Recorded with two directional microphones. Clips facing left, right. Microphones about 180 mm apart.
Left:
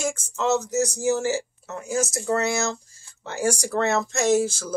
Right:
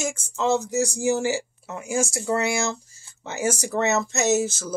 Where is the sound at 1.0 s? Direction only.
15° right (ahead or behind).